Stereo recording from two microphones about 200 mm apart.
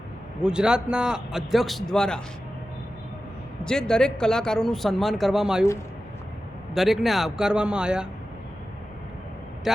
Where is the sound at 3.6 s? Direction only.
5° left (ahead or behind).